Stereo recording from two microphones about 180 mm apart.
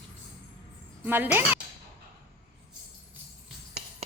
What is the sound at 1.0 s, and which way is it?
Speech, 10° right (ahead or behind).